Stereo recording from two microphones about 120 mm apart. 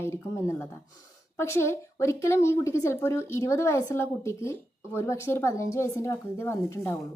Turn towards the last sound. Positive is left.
turn(degrees=25)  # may be behind; listen again after turning